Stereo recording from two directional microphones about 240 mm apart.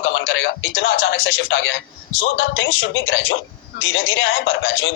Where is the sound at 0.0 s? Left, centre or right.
Left.